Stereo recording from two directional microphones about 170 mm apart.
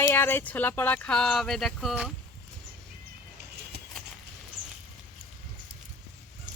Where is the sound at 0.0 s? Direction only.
10° left (ahead or behind).